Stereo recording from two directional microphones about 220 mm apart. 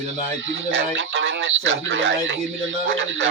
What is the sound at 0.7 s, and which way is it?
Speech, 60° right (ahead or behind).